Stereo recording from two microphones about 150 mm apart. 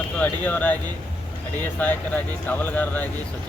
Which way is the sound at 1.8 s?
10° left (ahead or behind).